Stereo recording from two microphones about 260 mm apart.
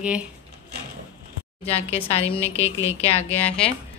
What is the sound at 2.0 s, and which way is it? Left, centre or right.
A woman's voice, left.